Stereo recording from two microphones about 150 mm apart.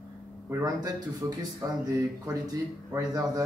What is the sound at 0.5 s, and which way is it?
Speech, 25° right (ahead or behind).